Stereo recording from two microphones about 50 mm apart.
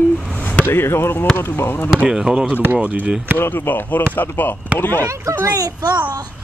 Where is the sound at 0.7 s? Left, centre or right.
Left.